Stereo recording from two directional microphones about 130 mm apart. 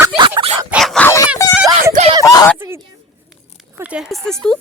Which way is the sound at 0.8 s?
Centre (ahead or behind).